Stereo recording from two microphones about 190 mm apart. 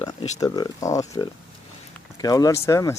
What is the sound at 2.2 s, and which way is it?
Speech, 20° left (ahead or behind).